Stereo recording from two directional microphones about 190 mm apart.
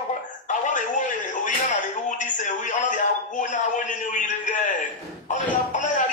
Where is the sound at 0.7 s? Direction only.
40° left (ahead or behind).